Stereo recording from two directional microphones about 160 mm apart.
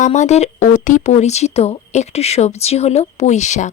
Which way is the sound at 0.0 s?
45° left (ahead or behind).